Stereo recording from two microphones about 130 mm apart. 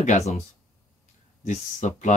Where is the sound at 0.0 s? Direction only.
65° left (ahead or behind).